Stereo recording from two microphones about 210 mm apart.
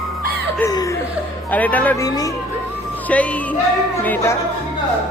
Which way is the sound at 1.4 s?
5° left (ahead or behind).